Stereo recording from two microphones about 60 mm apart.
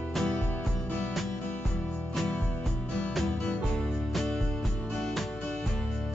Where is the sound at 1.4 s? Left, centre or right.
Left.